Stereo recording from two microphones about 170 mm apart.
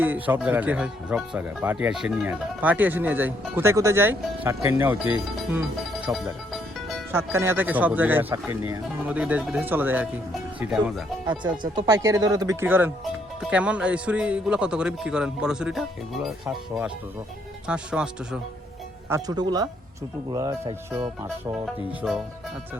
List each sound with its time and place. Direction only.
0.0 s speech: 10° right (ahead or behind)
5.5 s music: 5° right (ahead or behind)
7.1 s a man's voice: 15° right (ahead or behind)
11.3 s a man's voice: 25° right (ahead or behind); by 18.3 s 5° right (ahead or behind)
19.0 s speech: 20° right (ahead or behind)
22.0 s a man's voice: centre (ahead or behind)